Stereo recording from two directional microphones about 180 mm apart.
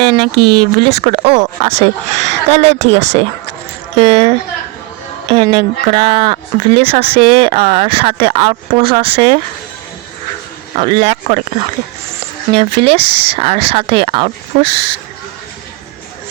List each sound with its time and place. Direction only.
0.0 s speech: 25° right (ahead or behind)
10.8 s speech: 35° right (ahead or behind)